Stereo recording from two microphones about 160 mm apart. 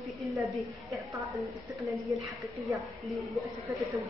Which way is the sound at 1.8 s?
Centre (ahead or behind).